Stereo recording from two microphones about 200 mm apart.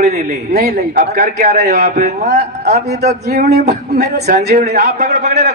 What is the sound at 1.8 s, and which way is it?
A man's voice, 35° right (ahead or behind).